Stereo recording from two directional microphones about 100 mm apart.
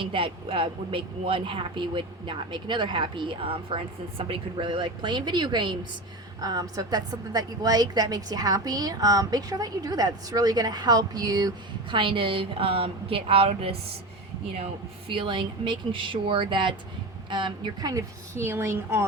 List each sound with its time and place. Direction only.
0.0 s speech: 60° right (ahead or behind)
6.4 s a woman's voice: 40° right (ahead or behind)
11.9 s a woman's voice: 55° right (ahead or behind); by 13.7 s 75° right (ahead or behind)
14.6 s speech: 60° right (ahead or behind)
18.3 s a woman's voice: 25° right (ahead or behind)